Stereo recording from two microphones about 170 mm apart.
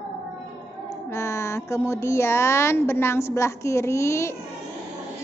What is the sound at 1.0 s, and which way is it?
Speech, 15° left (ahead or behind).